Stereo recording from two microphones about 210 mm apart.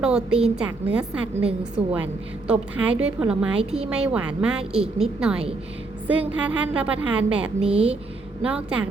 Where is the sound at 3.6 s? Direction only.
30° right (ahead or behind).